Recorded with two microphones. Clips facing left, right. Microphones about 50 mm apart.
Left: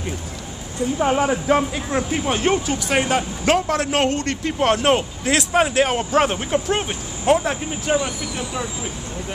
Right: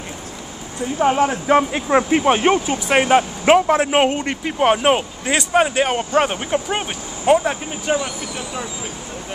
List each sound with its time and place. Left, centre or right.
0.9 s speech: centre
1.7 s speech: right; by 8.1 s centre